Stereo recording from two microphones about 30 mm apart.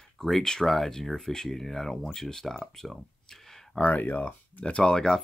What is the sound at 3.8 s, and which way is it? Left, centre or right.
Speech, left.